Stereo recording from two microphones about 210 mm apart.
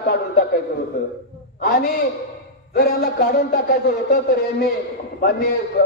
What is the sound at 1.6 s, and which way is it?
A man's voice, 45° left (ahead or behind).